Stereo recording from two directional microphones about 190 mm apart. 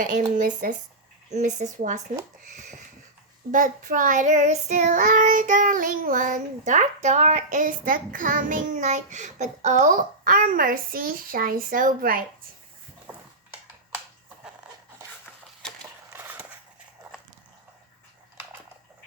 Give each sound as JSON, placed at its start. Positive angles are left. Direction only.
{"t": 0.3, "sound": "a woman's voice", "side_deg": -40}
{"t": 3.5, "sound": "child singing", "side_deg": -45}
{"t": 15.6, "sound": "a sound", "side_deg": 5}
{"t": 16.0, "sound": "skateboard", "side_deg": -10}